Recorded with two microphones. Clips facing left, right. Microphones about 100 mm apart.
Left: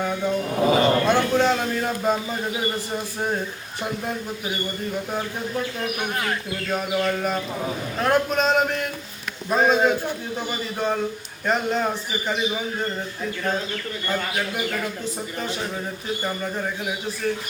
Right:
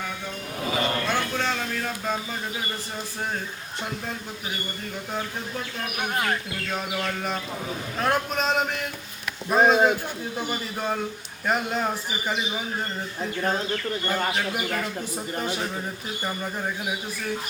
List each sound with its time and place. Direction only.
0.6 s music: 30° left (ahead or behind)
1.3 s speech: 20° left (ahead or behind)
6.7 s a man's voice: 5° left (ahead or behind)
16.2 s a man's voice: 5° right (ahead or behind)